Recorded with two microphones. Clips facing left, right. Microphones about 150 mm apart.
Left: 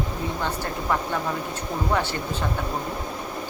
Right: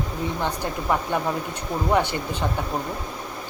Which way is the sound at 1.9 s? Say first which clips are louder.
Right 4 dB; 15° right (ahead or behind).